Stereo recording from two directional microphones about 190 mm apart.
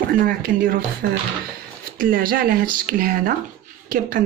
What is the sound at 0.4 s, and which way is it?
Speech, 50° right (ahead or behind).